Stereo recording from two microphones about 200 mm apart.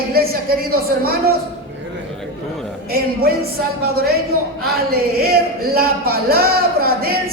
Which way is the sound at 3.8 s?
50° right (ahead or behind).